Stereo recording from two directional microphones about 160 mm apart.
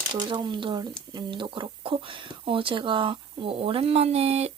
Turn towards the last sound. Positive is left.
turn(degrees=-40)  # may be behind; listen again after turning